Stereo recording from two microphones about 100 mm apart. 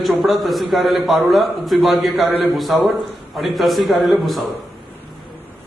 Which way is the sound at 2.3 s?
20° left (ahead or behind).